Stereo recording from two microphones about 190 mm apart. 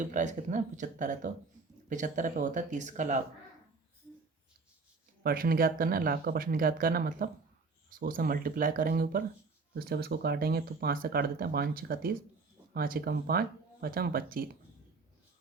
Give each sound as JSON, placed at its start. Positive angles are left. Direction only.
{"t": 0.1, "sound": "speech", "side_deg": -40}
{"t": 5.2, "sound": "speech", "side_deg": -50}